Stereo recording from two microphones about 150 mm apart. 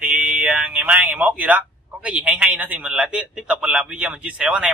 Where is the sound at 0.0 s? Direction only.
10° right (ahead or behind).